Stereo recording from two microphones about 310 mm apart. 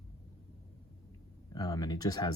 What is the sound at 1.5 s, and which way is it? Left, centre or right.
Speech, centre.